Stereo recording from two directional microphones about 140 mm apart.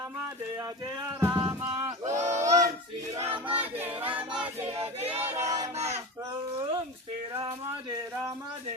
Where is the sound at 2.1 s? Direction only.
55° right (ahead or behind).